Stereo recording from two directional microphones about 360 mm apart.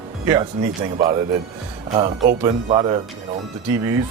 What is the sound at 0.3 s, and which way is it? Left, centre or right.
Speech, centre.